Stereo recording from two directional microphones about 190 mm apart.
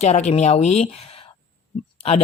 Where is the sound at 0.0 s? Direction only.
35° left (ahead or behind).